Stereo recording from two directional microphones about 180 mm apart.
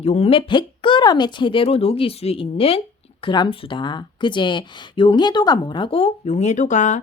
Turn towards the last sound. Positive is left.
turn(degrees=40)  # may be behind; listen again after turning